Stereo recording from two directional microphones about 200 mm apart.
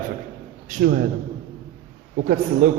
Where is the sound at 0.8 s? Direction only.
55° right (ahead or behind).